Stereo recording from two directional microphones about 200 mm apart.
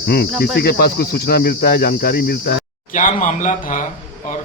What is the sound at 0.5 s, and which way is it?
Speech, 50° left (ahead or behind).